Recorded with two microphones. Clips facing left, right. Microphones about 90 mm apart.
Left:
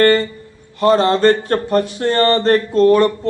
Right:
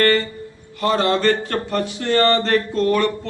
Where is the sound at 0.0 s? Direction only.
30° left (ahead or behind).